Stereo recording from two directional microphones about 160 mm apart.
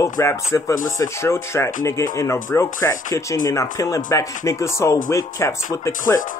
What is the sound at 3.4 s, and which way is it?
Music, 20° left (ahead or behind).